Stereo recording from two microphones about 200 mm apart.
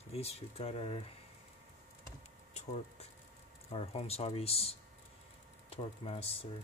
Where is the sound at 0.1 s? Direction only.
30° left (ahead or behind).